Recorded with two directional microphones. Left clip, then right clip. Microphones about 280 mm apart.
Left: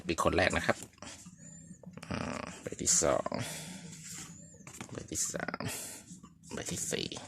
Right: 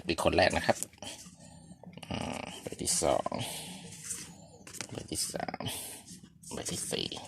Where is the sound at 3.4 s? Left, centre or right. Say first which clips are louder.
Right 2 dB; left.